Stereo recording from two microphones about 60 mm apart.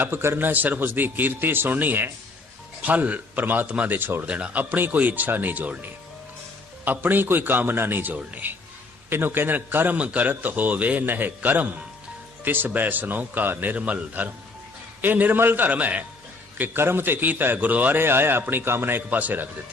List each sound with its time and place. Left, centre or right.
0.0 s a man's voice: right
4.3 s a man's voice: centre
16.6 s a man's voice: right